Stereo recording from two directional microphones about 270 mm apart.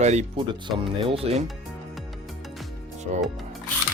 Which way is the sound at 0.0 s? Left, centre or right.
Right.